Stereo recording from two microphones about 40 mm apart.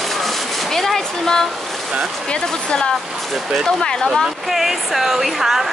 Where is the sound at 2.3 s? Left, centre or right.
Left.